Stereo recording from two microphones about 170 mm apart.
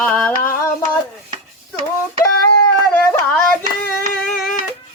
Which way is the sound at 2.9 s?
5° left (ahead or behind).